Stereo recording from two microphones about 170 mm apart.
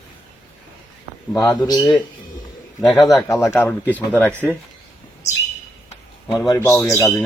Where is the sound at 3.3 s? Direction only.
15° left (ahead or behind).